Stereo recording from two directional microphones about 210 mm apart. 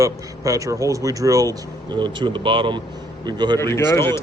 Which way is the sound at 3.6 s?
15° left (ahead or behind).